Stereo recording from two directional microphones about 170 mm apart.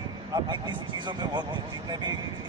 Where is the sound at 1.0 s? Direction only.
25° right (ahead or behind).